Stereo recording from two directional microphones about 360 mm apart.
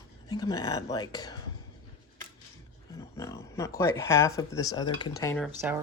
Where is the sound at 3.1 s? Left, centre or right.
Centre.